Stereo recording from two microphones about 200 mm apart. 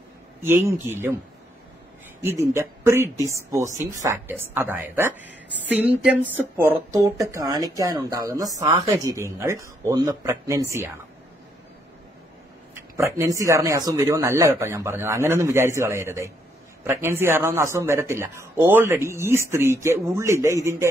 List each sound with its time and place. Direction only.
0.4 s speech: 15° right (ahead or behind)
2.2 s speech: 10° right (ahead or behind)
12.7 s speech: 15° right (ahead or behind)